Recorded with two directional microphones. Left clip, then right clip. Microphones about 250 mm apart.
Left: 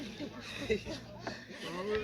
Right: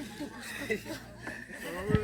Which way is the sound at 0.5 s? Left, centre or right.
Right.